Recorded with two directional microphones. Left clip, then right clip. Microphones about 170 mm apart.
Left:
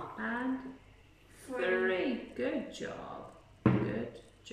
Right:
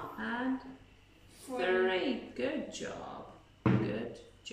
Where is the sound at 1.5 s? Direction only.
20° right (ahead or behind).